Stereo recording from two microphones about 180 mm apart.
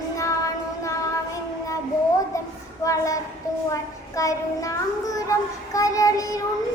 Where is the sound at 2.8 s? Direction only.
15° left (ahead or behind).